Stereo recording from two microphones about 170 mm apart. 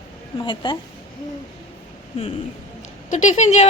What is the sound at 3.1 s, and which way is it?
Speech, 45° left (ahead or behind).